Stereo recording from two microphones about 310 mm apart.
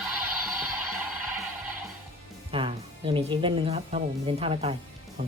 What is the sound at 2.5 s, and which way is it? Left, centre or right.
Speech, centre.